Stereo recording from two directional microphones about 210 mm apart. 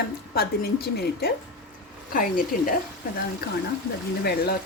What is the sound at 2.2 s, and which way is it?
A woman's voice, 40° left (ahead or behind).